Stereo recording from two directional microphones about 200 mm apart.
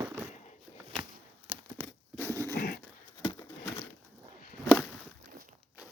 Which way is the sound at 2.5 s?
50° left (ahead or behind).